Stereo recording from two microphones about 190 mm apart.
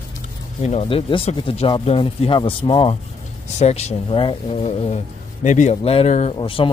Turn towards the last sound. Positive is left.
turn(degrees=25)  # may be behind; listen again after turning